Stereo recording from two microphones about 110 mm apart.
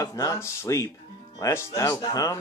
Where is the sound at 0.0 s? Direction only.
30° left (ahead or behind).